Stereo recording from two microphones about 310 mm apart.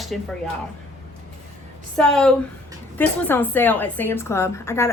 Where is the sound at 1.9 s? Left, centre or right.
Centre.